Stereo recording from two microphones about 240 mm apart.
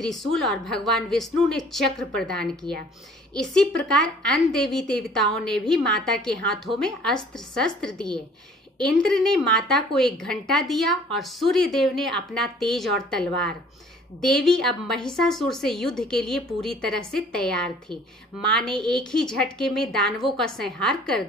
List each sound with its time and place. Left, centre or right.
0.0 s a woman's voice: centre
4.3 s a woman's voice: centre